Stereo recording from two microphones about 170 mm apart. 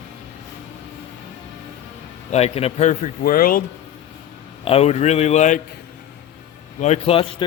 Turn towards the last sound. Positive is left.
turn(degrees=35)  # may be behind; listen again after turning